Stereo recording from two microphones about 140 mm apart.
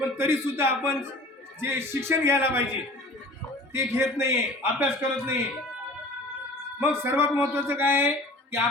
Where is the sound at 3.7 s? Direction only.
20° right (ahead or behind).